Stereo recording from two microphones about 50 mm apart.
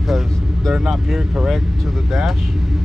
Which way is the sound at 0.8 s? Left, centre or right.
Centre.